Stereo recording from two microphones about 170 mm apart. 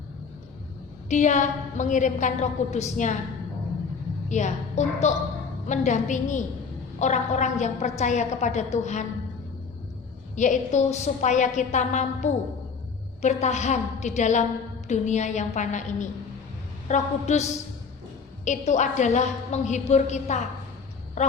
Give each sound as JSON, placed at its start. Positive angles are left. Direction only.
{"t": 1.1, "sound": "a woman's voice", "side_deg": 45}
{"t": 4.3, "sound": "a woman's voice", "side_deg": 45}
{"t": 10.3, "sound": "a woman's voice", "side_deg": 45}